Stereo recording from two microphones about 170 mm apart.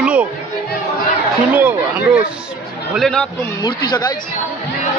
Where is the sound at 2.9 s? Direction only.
5° left (ahead or behind).